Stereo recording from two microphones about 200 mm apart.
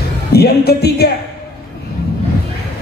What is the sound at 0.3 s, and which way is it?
Speech, 50° left (ahead or behind).